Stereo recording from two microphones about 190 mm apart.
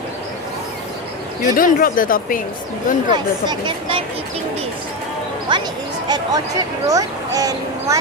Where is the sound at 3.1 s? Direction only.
20° right (ahead or behind).